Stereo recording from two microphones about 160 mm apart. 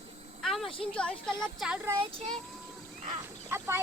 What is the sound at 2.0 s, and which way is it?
Speech, 35° right (ahead or behind).